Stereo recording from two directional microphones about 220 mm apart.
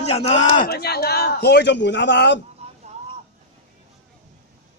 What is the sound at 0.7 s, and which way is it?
A man's voice, 45° left (ahead or behind).